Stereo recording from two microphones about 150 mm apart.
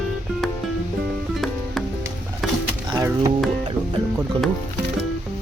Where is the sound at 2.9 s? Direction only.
25° right (ahead or behind).